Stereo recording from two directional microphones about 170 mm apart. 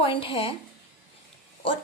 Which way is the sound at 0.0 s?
30° left (ahead or behind).